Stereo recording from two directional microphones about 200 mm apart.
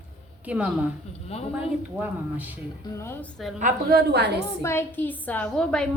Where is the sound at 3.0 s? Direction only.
10° left (ahead or behind).